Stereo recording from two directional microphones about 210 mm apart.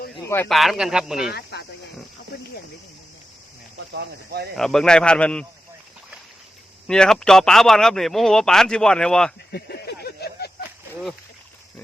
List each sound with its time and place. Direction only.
0.3 s speech: 5° left (ahead or behind)
1.3 s a sound: 50° left (ahead or behind)
3.8 s speech: 55° right (ahead or behind)
4.5 s speech: centre (ahead or behind)
6.8 s speech: 5° left (ahead or behind)
9.5 s a sound: 50° left (ahead or behind)